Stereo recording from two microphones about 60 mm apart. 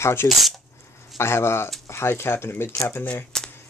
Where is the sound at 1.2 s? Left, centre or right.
Left.